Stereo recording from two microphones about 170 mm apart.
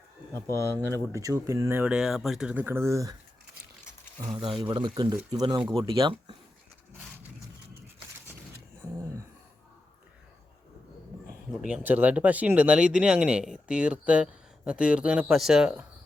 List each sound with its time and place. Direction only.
0.9 s speech: 15° right (ahead or behind)
4.4 s speech: 30° right (ahead or behind)
11.5 s speech: 5° right (ahead or behind)